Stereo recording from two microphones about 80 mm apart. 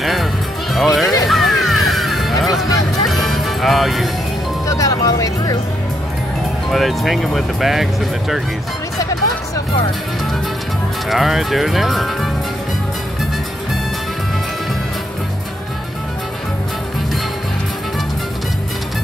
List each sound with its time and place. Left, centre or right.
0.0 s music: centre
0.7 s speech: centre
1.2 s music: centre
4.6 s speech: left
6.7 s speech: centre
11.1 s speech: centre